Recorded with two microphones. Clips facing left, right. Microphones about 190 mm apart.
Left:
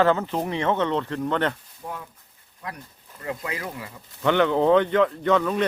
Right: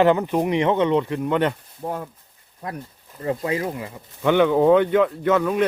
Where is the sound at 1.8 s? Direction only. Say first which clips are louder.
Right 7 dB; 45° right (ahead or behind); by 3.9 s 25° right (ahead or behind).